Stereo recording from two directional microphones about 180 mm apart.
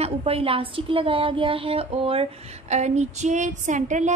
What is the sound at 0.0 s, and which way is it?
A woman's voice, 30° right (ahead or behind).